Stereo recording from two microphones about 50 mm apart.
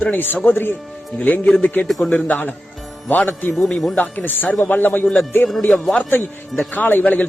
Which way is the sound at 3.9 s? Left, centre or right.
Left.